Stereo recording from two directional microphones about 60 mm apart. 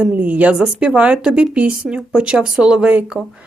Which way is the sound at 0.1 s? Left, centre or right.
Right.